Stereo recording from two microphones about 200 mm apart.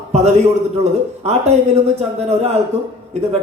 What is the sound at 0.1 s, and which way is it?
A man's voice, 35° right (ahead or behind).